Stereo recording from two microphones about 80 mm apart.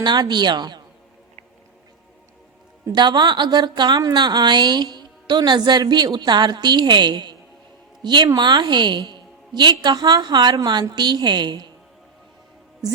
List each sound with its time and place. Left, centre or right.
0.0 s a woman's voice: right
2.9 s a woman's voice: right